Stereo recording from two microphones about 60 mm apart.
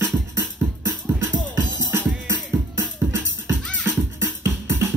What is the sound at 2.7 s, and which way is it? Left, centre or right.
Music, right.